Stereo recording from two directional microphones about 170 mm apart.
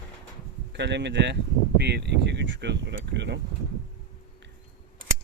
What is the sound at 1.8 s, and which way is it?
Speech, 80° right.